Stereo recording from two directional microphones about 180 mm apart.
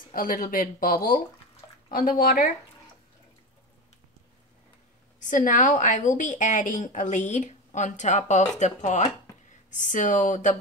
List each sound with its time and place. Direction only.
0.1 s a woman's voice: 50° left (ahead or behind)
5.2 s a woman's voice: 45° left (ahead or behind)